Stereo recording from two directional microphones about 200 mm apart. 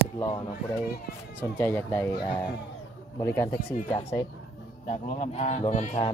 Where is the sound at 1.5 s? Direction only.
10° left (ahead or behind).